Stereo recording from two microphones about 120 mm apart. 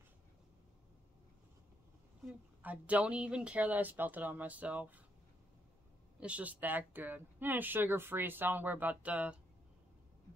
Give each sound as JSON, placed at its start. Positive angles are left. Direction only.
{"t": 2.6, "sound": "speech", "side_deg": -10}
{"t": 6.1, "sound": "speech", "side_deg": -10}